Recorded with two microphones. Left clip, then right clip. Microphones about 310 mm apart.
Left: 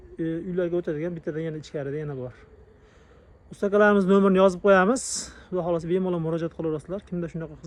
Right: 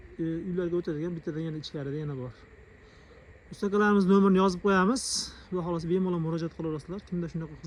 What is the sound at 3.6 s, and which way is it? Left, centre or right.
Speech, centre.